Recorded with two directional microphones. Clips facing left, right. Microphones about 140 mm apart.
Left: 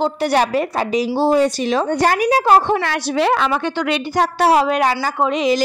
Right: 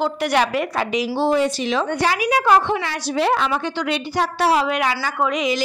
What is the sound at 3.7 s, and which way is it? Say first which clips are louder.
Speech: left 3 dB; 55° left (ahead or behind).